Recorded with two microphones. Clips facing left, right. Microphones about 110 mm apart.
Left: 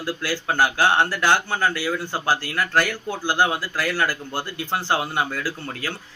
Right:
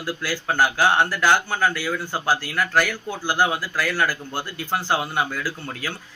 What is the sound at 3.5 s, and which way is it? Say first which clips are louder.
Speech: even; 25° left (ahead or behind).